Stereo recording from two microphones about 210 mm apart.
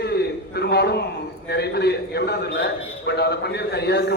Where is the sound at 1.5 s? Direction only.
50° left (ahead or behind).